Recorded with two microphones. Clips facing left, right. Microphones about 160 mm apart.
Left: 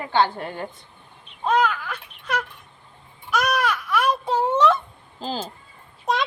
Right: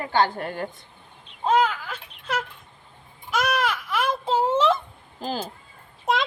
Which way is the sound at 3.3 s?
25° right (ahead or behind).